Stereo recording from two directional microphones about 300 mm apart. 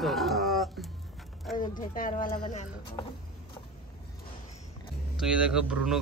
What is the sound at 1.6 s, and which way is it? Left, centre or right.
Speech, left.